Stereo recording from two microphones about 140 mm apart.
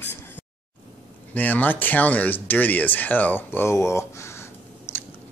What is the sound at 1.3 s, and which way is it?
Speech, 10° left (ahead or behind).